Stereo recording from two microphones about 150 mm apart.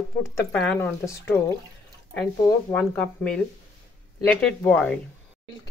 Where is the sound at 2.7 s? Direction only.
10° left (ahead or behind).